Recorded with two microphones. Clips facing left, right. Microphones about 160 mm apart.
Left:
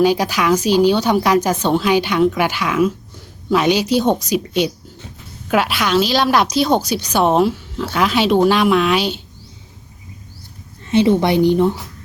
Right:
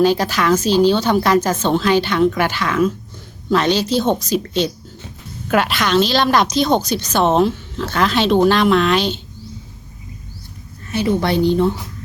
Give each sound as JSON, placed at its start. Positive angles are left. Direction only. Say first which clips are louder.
{"t": 0.0, "sound": "a woman's voice", "louder": "even", "side_deg": 10}
{"t": 10.8, "sound": "a woman's voice", "louder": "left 4 dB", "side_deg": 25}